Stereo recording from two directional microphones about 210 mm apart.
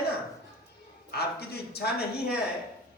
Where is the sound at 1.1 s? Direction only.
50° left (ahead or behind).